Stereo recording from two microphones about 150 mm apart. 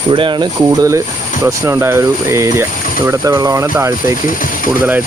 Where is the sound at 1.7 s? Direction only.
15° right (ahead or behind).